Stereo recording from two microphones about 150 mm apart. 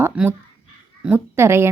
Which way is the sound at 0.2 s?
5° right (ahead or behind).